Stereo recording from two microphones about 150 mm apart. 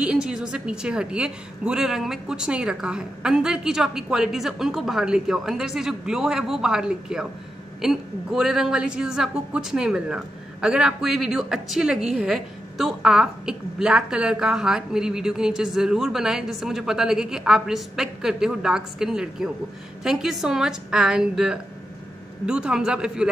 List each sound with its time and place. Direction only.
0.0 s a woman's voice: 5° right (ahead or behind)